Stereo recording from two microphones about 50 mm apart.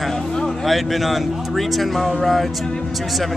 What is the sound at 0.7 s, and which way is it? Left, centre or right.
Speech, centre.